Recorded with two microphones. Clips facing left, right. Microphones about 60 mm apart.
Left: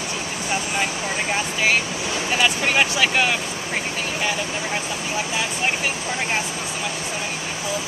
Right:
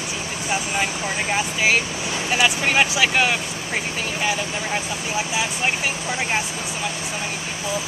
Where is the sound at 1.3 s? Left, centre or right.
Centre.